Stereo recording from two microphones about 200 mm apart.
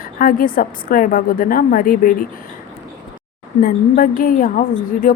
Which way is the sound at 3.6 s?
45° left (ahead or behind).